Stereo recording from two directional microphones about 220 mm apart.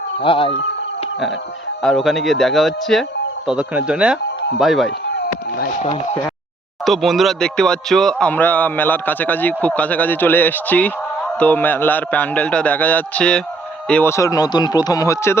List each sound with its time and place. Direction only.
0.2 s speech: 25° left (ahead or behind)
1.8 s speech: centre (ahead or behind)
6.8 s speech: centre (ahead or behind)